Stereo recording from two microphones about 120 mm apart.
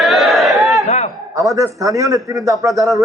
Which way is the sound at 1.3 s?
30° right (ahead or behind).